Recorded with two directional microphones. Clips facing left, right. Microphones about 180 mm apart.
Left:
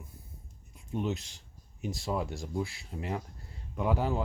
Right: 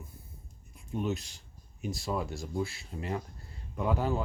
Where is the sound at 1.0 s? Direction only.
20° left (ahead or behind).